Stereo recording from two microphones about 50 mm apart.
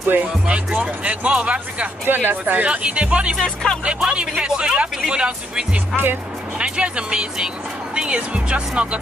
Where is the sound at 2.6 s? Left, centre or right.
Right.